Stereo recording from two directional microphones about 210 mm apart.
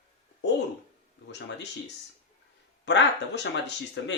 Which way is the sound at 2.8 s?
55° left (ahead or behind).